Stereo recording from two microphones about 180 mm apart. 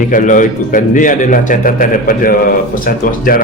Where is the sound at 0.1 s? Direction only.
45° left (ahead or behind).